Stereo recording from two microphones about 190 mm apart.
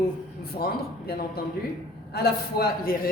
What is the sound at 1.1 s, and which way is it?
Speech, 55° left (ahead or behind).